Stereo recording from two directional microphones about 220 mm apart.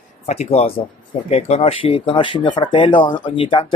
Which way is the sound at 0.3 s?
30° left (ahead or behind).